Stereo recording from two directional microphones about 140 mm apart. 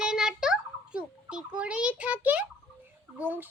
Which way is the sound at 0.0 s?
5° right (ahead or behind).